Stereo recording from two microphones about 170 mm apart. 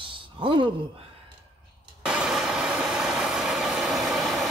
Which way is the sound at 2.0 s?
5° right (ahead or behind).